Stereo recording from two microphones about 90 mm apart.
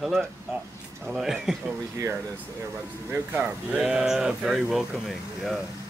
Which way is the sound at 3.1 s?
25° right (ahead or behind).